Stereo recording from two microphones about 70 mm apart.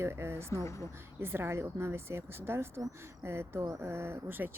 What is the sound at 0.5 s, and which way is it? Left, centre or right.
Speech, left.